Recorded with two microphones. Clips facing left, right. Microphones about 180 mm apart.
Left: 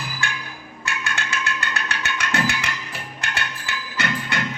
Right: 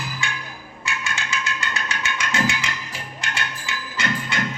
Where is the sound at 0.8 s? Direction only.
60° left (ahead or behind).